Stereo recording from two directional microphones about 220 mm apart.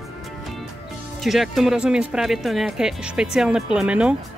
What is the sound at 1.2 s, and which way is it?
Speech, centre (ahead or behind).